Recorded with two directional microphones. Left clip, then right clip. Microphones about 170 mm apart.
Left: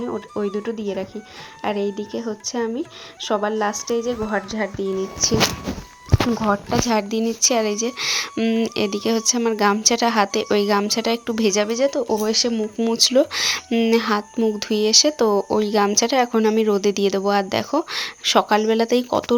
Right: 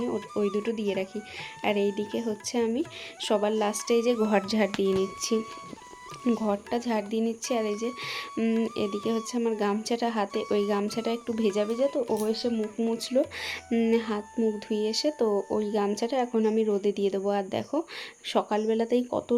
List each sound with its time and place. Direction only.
0.0 s speech: centre (ahead or behind); by 4.7 s 20° right (ahead or behind)
4.8 s speech: centre (ahead or behind)
13.9 s speech: 10° left (ahead or behind)